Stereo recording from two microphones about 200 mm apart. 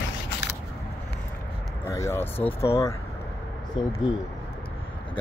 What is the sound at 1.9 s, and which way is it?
Speech, 15° left (ahead or behind).